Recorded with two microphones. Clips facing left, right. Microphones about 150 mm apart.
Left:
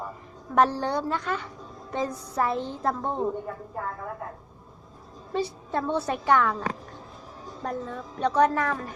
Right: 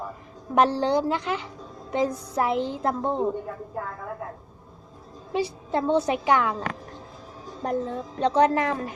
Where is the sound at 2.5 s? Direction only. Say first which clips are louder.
Right 4 dB; 90° right.